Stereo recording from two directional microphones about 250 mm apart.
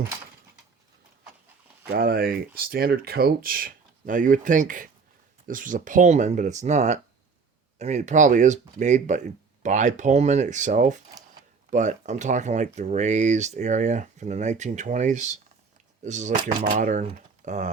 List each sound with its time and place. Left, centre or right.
1.9 s speech: right